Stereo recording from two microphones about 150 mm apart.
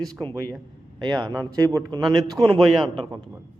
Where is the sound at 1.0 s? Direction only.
30° right (ahead or behind).